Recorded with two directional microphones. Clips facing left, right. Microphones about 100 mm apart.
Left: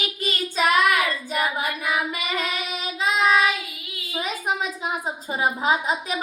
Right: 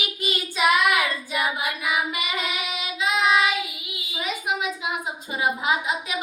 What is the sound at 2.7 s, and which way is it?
Child singing, 35° left (ahead or behind).